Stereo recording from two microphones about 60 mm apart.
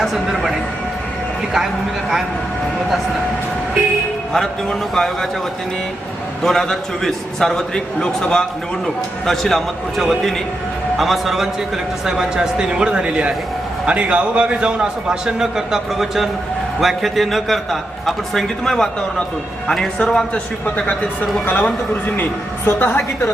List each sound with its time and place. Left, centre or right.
0.0 s a man's voice: centre
4.3 s a man's voice: centre
6.4 s a man's voice: centre
20.7 s a woman's voice: left